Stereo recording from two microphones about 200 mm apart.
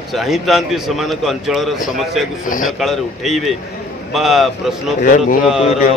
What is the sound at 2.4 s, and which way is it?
Speech, 40° left (ahead or behind).